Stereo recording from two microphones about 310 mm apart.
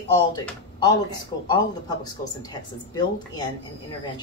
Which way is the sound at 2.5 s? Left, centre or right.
Centre.